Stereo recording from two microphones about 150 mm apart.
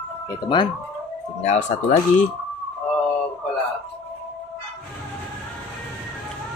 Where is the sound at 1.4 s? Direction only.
50° left (ahead or behind).